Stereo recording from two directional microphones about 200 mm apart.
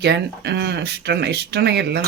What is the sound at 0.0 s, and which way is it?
Speech, 55° right (ahead or behind).